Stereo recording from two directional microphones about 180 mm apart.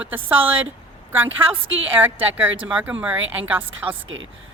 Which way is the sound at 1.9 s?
10° right (ahead or behind).